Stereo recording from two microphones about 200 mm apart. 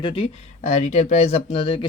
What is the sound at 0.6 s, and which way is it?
Speech, 35° left (ahead or behind).